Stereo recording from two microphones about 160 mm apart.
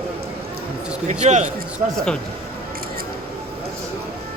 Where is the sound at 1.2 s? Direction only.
45° right (ahead or behind).